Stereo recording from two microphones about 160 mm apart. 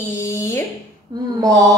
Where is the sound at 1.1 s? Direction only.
25° right (ahead or behind).